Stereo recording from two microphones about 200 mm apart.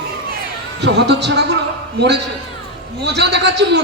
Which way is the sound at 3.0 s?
60° right (ahead or behind).